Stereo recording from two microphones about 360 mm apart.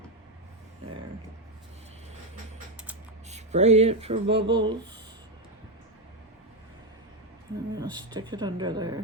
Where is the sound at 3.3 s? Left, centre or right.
Centre.